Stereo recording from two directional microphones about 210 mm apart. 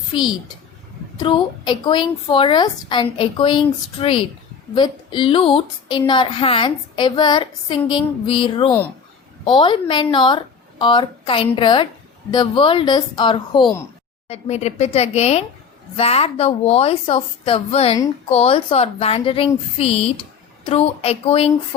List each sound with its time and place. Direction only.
1.2 s a woman's voice: 20° left (ahead or behind)